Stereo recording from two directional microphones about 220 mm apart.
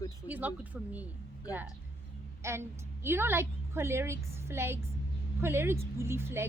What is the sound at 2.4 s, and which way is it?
A woman's voice, 10° right (ahead or behind).